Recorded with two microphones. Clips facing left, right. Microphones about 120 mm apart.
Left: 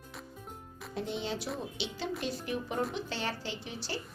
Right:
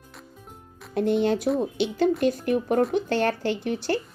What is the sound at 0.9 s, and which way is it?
A woman's voice, 60° right (ahead or behind).